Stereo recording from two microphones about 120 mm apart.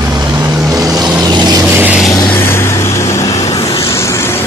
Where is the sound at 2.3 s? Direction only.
20° left (ahead or behind).